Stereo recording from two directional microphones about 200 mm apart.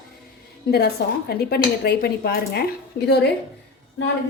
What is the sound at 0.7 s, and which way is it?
A woman's voice, 50° left (ahead or behind).